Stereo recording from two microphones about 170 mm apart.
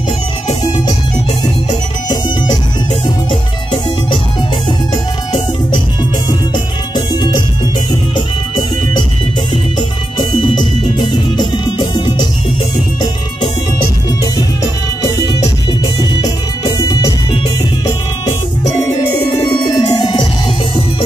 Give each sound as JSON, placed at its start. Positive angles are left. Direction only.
{"t": 0.5, "sound": "music", "side_deg": 25}
{"t": 4.6, "sound": "music", "side_deg": 25}
{"t": 7.2, "sound": "music", "side_deg": 25}
{"t": 11.0, "sound": "music", "side_deg": 25}
{"t": 15.1, "sound": "music", "side_deg": 25}
{"t": 16.6, "sound": "music", "side_deg": 25}
{"t": 18.8, "sound": "music", "side_deg": 20}